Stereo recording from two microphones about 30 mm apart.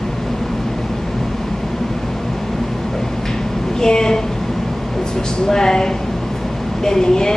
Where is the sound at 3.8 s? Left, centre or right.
Left.